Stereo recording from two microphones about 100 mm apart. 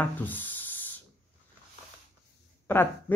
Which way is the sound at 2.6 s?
20° left (ahead or behind).